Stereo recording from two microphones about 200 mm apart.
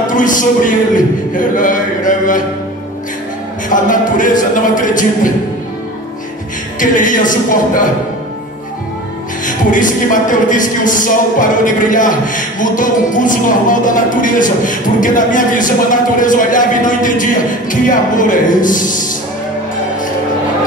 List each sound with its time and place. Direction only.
0.0 s speech: 40° left (ahead or behind)
3.6 s speech: 40° left (ahead or behind)
6.8 s speech: 40° left (ahead or behind)
9.5 s speech: 40° left (ahead or behind)